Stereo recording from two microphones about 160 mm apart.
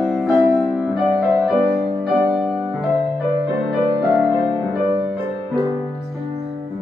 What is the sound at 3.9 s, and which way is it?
Music, 25° right (ahead or behind).